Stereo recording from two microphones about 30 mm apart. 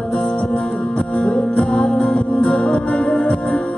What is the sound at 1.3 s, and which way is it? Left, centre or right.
Music, left.